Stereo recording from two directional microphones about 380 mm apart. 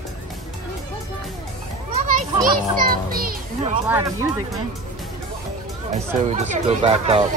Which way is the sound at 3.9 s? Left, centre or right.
Centre.